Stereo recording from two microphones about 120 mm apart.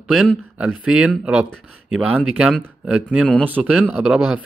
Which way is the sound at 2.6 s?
10° right (ahead or behind).